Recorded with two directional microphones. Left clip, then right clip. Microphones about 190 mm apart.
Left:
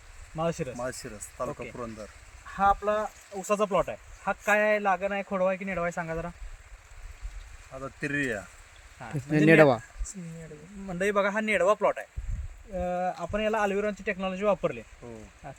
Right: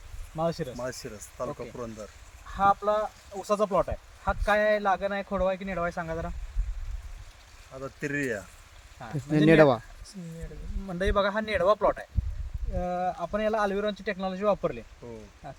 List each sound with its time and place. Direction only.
0.8 s speech: 15° right (ahead or behind)
2.6 s speech: 10° left (ahead or behind)
7.7 s speech: 15° right (ahead or behind)
9.0 s speech: 10° left (ahead or behind)
9.3 s speech: 5° right (ahead or behind)
10.8 s speech: 15° left (ahead or behind)